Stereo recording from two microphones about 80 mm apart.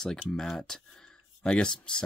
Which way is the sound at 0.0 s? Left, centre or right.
Centre.